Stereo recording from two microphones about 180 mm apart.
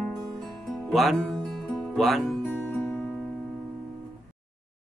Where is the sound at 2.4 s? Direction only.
10° left (ahead or behind).